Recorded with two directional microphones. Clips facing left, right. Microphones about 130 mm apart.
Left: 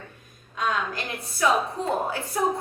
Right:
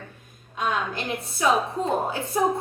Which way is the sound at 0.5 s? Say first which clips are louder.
Right 1 dB; 25° right (ahead or behind).